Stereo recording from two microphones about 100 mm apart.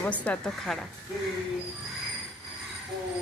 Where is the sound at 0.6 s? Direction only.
5° left (ahead or behind).